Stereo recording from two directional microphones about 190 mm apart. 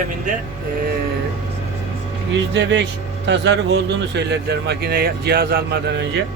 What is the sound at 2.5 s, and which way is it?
Speech, 70° right (ahead or behind).